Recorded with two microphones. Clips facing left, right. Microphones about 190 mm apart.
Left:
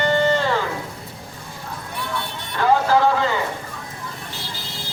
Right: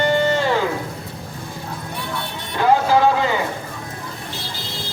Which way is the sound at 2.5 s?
15° right (ahead or behind).